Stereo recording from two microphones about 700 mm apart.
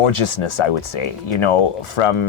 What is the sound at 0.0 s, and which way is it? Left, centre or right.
Speech, left.